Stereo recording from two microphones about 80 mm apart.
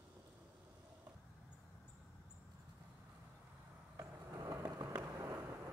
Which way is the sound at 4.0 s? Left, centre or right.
Right.